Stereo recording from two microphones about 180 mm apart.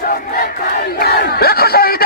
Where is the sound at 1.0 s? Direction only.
60° left (ahead or behind).